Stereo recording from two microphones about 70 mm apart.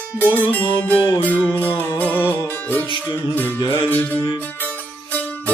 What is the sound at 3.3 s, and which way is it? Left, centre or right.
Music, left.